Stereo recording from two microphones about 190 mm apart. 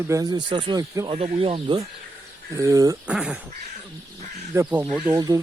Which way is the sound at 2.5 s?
15° right (ahead or behind).